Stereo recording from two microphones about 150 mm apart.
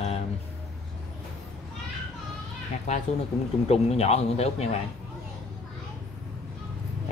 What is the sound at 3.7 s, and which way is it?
Speech, 45° left (ahead or behind).